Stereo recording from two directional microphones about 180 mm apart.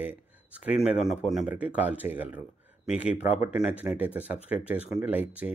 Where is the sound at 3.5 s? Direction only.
5° right (ahead or behind).